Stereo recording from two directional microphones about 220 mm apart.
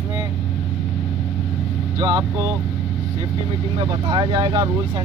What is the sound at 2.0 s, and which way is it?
Speech, 15° right (ahead or behind).